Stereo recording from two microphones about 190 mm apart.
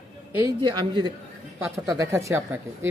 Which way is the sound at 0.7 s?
20° right (ahead or behind).